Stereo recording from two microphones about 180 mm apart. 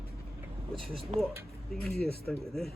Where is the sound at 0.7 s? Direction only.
Centre (ahead or behind).